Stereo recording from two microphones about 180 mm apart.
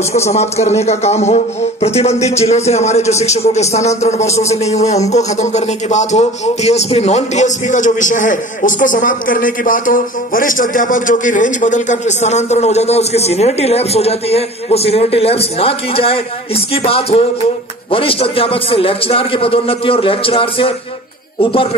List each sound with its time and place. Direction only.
0.3 s a man's voice: 40° left (ahead or behind)